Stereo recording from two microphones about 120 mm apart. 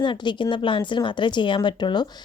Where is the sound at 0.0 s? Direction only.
40° left (ahead or behind).